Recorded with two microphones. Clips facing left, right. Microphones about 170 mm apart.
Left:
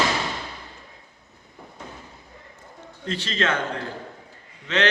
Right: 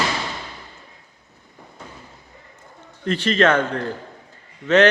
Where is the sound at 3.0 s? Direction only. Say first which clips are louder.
Right 8 dB; 60° right (ahead or behind).